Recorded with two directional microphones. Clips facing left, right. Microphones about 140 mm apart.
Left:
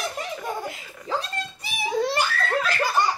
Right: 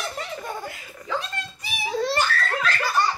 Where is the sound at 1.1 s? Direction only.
35° left (ahead or behind).